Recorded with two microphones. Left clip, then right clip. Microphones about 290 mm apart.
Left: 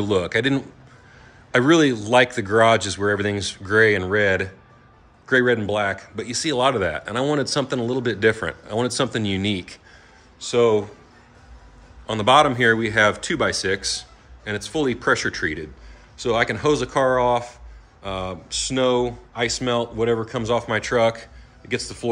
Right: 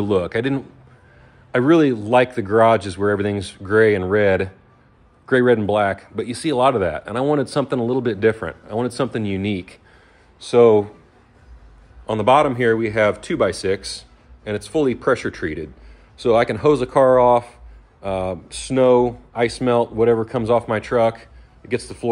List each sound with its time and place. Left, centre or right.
0.0 s speech: centre
12.1 s speech: centre